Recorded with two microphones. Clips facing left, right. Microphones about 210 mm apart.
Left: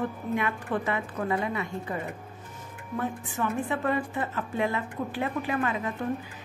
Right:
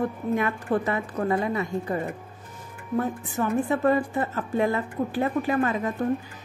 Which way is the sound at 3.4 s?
40° right (ahead or behind).